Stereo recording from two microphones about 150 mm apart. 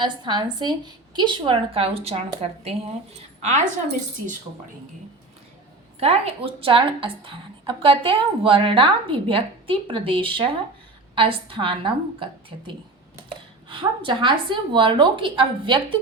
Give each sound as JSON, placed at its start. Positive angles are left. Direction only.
{"t": 0.0, "sound": "a woman's voice", "side_deg": -30}
{"t": 3.4, "sound": "a woman's voice", "side_deg": -50}
{"t": 6.0, "sound": "a woman's voice", "side_deg": -40}